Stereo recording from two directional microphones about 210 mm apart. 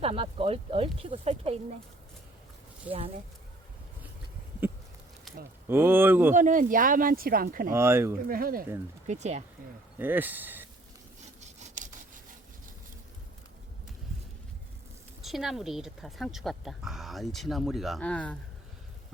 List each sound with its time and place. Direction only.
0.0 s speech: 25° right (ahead or behind)
5.6 s speech: 10° right (ahead or behind)
6.3 s speech: 40° right (ahead or behind)
7.7 s speech: 10° right (ahead or behind)
8.3 s speech: 45° right (ahead or behind)
9.0 s speech: 35° right (ahead or behind)
10.0 s speech: 10° right (ahead or behind)
11.3 s sawing: 35° right (ahead or behind)
15.2 s speech: centre (ahead or behind)